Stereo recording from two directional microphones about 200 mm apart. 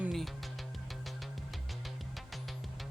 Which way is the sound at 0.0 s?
Centre (ahead or behind).